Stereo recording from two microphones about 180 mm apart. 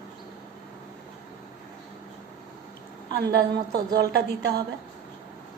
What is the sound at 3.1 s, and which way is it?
A woman's voice, 60° right (ahead or behind).